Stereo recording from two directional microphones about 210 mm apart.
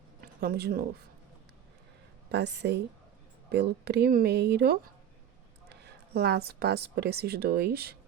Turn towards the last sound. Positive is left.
turn(degrees=-50)  # may be behind; listen again after turning